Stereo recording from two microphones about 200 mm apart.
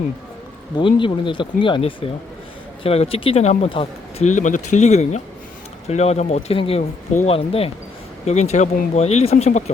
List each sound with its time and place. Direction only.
0.8 s speech: 25° left (ahead or behind)